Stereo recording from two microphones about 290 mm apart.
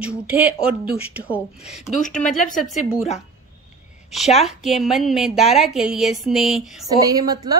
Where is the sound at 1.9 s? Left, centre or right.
Left.